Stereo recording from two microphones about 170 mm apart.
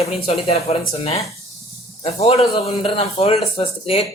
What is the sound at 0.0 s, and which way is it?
Speech, 35° left (ahead or behind).